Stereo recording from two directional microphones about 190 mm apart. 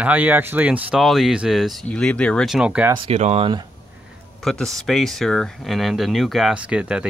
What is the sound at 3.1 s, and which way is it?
Speech, 35° right (ahead or behind).